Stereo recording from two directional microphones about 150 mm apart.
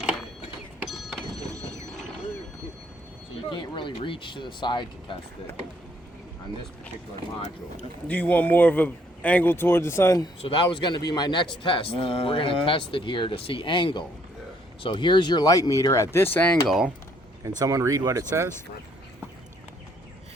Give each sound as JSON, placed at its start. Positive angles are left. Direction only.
{"t": 0.0, "sound": "sewing machine", "side_deg": -10}
{"t": 0.9, "sound": "printer", "side_deg": 0}
{"t": 3.5, "sound": "speech", "side_deg": 35}
{"t": 8.0, "sound": "speech", "side_deg": 10}
{"t": 10.4, "sound": "speech", "side_deg": 35}
{"t": 16.6, "sound": "speech", "side_deg": -5}
{"t": 17.6, "sound": "speech", "side_deg": -20}